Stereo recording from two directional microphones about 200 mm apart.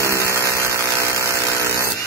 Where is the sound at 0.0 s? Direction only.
15° right (ahead or behind).